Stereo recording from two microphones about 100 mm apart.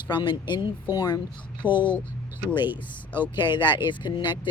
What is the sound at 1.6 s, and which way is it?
Speech, 20° right (ahead or behind).